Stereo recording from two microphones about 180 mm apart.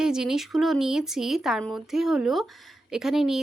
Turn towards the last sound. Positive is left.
turn(degrees=0)  # may be behind; listen again after turning